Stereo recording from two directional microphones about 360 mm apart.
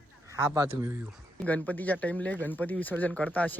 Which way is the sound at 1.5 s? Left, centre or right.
Centre.